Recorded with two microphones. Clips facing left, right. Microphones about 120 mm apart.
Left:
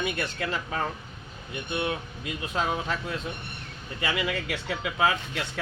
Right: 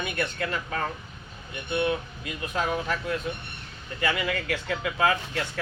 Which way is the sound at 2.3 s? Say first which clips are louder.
Even; 25° left (ahead or behind).